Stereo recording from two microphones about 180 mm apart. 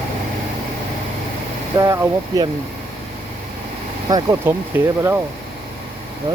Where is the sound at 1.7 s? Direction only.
15° right (ahead or behind).